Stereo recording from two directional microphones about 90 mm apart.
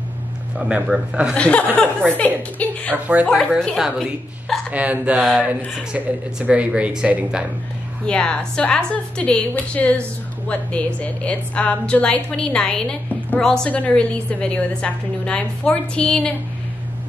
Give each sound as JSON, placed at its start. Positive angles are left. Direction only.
{"t": 0.6, "sound": "speech", "side_deg": -10}
{"t": 1.3, "sound": "a woman's voice", "side_deg": 15}
{"t": 4.6, "sound": "speech", "side_deg": -15}
{"t": 8.1, "sound": "a woman's voice", "side_deg": 10}